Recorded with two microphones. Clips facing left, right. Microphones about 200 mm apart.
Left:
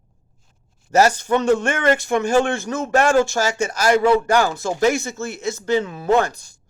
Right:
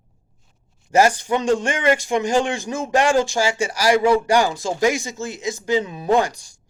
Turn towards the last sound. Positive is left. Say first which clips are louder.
# left 1 dB
turn(degrees=-15)  # may be behind; listen again after turning